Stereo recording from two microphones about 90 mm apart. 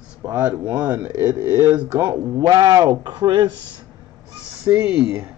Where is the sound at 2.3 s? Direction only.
45° right (ahead or behind).